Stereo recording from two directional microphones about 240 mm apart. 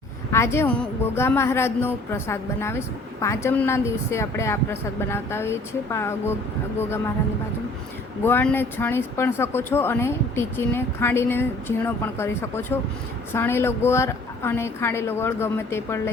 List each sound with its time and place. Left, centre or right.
0.3 s speech: centre
8.2 s speech: centre